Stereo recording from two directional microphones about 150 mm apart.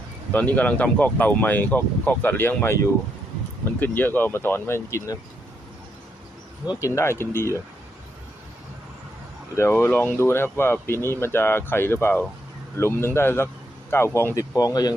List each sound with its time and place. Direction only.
0.3 s speech: 10° left (ahead or behind)
6.7 s speech: 20° left (ahead or behind)
9.6 s speech: 15° left (ahead or behind)